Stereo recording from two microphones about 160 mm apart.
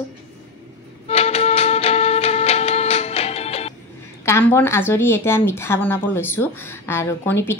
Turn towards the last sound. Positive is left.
turn(degrees=15)  # may be behind; listen again after turning